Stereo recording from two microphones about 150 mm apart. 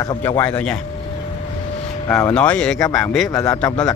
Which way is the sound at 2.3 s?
10° left (ahead or behind).